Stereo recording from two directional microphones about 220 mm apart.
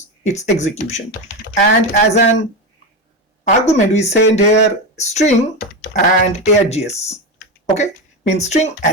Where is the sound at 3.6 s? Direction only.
30° left (ahead or behind).